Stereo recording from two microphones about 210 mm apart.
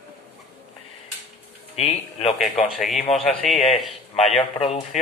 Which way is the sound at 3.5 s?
30° left (ahead or behind).